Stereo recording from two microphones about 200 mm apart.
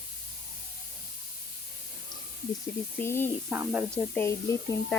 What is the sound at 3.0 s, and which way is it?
Speech, 10° left (ahead or behind).